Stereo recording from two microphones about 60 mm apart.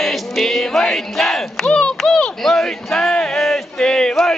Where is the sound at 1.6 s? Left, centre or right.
Centre.